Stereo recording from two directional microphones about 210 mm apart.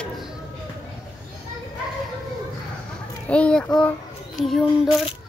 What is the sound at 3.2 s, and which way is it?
A child's voice, 5° left (ahead or behind).